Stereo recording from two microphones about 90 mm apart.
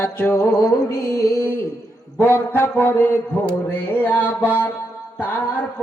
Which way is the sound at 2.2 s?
25° left (ahead or behind).